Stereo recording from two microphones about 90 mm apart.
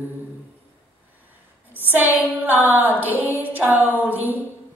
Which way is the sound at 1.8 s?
20° right (ahead or behind).